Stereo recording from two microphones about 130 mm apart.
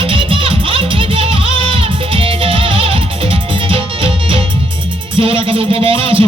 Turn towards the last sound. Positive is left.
turn(degrees=-45)  # may be behind; listen again after turning